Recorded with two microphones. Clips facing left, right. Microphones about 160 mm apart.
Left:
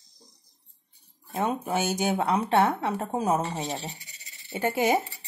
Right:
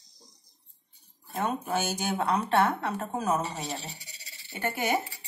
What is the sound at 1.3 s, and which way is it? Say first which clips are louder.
Speech: left 2 dB; 20° left (ahead or behind).